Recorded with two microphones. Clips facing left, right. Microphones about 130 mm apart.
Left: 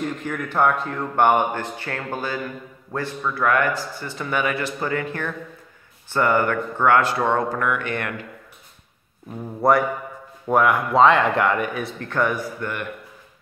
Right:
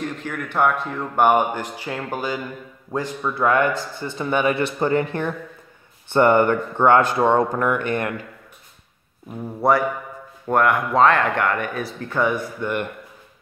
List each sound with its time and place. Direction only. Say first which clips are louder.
0.0 s speech: left 1 dB; centre (ahead or behind); by 5.0 s 25° right (ahead or behind)
6.1 s speech: right 4 dB; 25° right (ahead or behind)
9.3 s speech: even; centre (ahead or behind)